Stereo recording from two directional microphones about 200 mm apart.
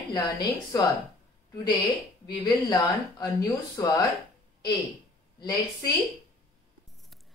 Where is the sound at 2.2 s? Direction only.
20° left (ahead or behind).